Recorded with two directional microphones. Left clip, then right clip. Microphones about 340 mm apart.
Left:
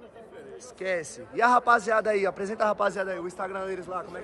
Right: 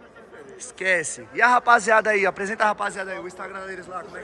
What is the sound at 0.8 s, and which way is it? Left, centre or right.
Speech, centre.